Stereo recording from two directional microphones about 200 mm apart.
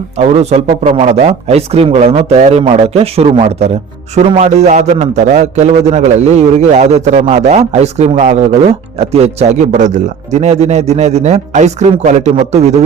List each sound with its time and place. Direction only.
0.2 s a man's voice: 30° right (ahead or behind)